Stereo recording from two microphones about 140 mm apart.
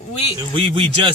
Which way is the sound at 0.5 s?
40° right (ahead or behind).